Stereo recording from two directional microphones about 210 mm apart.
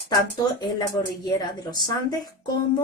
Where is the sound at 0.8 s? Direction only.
20° left (ahead or behind).